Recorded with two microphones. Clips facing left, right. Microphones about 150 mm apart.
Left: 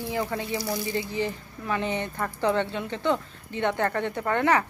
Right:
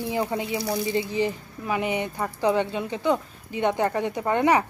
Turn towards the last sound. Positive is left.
turn(degrees=-15)  # may be behind; listen again after turning